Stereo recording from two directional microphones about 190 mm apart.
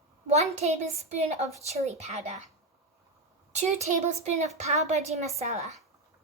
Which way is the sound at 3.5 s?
35° right (ahead or behind).